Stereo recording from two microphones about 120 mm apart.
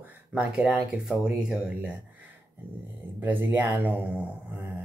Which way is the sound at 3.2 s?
15° right (ahead or behind).